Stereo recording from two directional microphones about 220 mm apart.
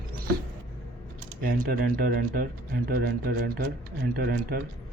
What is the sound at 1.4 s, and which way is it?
Speech, 40° right (ahead or behind).